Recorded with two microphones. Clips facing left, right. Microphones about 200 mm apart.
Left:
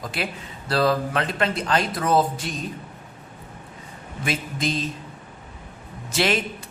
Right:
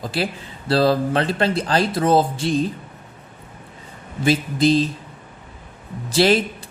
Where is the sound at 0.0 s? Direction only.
35° right (ahead or behind).